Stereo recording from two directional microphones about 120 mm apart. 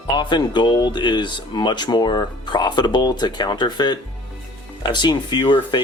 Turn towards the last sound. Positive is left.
turn(degrees=40)  # may be behind; listen again after turning